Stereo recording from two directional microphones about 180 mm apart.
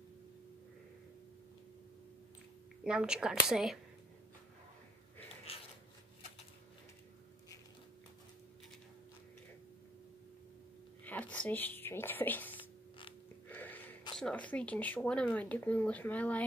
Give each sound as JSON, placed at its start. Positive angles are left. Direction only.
{"t": 2.8, "sound": "speech", "side_deg": -5}
{"t": 11.1, "sound": "a sound", "side_deg": 5}
{"t": 14.1, "sound": "speech", "side_deg": 5}